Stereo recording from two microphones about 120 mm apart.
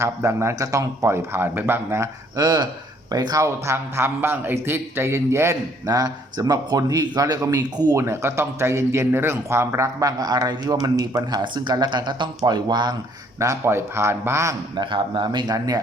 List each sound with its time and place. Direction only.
0.0 s speech: 25° right (ahead or behind)
2.4 s speech: 35° right (ahead or behind)
13.4 s speech: 25° right (ahead or behind)
14.8 s speech: 40° right (ahead or behind)